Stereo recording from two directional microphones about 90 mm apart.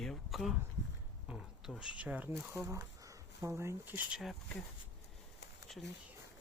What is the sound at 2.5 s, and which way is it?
Speech, 30° right (ahead or behind).